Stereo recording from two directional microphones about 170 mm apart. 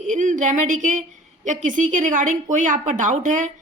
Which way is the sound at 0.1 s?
45° right (ahead or behind).